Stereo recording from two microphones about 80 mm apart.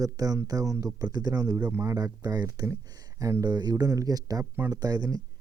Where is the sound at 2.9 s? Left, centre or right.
Right.